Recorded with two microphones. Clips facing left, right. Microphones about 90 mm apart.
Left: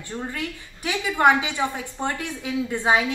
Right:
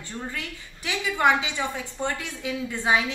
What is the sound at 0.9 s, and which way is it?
Speech, 15° left (ahead or behind).